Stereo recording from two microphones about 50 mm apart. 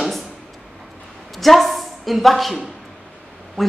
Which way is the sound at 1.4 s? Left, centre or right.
Centre.